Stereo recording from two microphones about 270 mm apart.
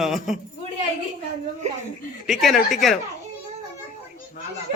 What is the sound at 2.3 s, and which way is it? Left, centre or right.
Speech, centre.